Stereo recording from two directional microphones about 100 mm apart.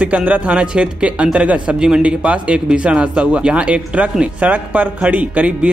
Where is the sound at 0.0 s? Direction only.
15° right (ahead or behind).